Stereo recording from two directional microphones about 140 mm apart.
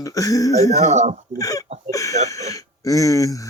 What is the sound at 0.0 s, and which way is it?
Speech, 25° left (ahead or behind).